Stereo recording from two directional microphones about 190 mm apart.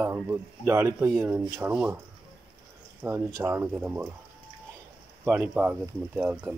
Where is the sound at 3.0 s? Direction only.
15° right (ahead or behind).